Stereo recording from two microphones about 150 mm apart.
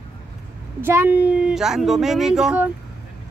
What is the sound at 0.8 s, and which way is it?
Speech, 15° right (ahead or behind).